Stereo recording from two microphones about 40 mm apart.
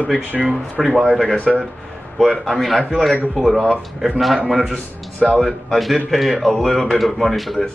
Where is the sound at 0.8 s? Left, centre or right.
Centre.